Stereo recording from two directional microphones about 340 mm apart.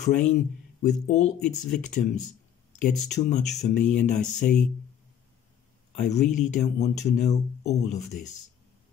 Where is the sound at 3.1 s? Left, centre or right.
Left.